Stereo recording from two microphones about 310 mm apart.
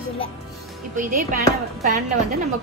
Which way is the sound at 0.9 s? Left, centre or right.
Right.